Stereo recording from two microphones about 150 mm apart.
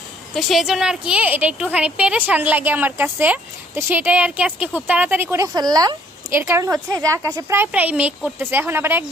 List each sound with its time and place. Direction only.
0.3 s a woman's voice: centre (ahead or behind); by 7.4 s 25° right (ahead or behind)
7.5 s a woman's voice: 15° right (ahead or behind)